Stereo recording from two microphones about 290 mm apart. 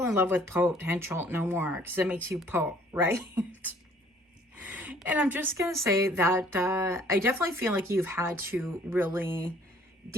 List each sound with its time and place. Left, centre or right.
0.0 s speech: centre
4.5 s a sound: centre
5.8 s speech: centre